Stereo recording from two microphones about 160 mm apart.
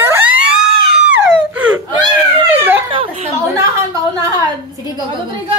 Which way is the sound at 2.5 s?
10° right (ahead or behind).